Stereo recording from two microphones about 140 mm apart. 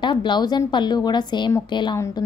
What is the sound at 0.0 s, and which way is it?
Speech, 35° left (ahead or behind).